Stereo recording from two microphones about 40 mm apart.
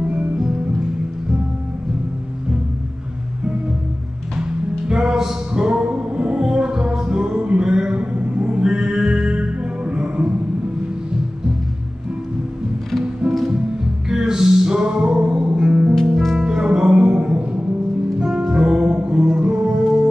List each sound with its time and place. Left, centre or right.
4.4 s music: right
14.0 s music: centre